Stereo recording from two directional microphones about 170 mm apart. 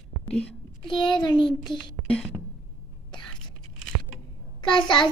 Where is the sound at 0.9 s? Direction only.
25° left (ahead or behind).